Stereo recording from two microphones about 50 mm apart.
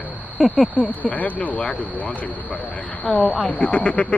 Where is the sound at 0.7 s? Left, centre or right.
Left.